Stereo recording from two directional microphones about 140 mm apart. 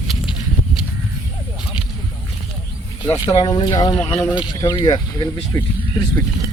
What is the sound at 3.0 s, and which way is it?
Speech, 30° left (ahead or behind).